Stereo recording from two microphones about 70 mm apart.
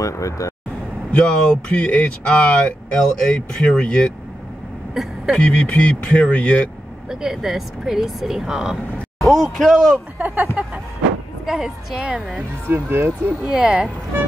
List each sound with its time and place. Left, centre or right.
0.0 s speech: left
1.1 s speech: centre
5.0 s speech: centre
5.4 s speech: centre
7.1 s speech: centre
9.2 s speech: centre
10.1 s speech: right
11.4 s speech: centre
12.6 s speech: right
13.4 s speech: centre